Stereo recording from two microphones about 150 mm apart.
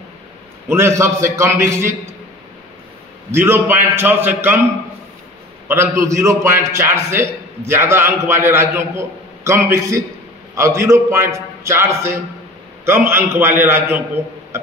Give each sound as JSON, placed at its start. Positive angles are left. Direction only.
{"t": 0.7, "sound": "a man's voice", "side_deg": -15}
{"t": 3.3, "sound": "a man's voice", "side_deg": -15}
{"t": 5.7, "sound": "a man's voice", "side_deg": -15}